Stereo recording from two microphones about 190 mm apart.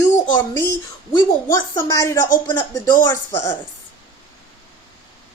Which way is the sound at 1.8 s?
15° left (ahead or behind).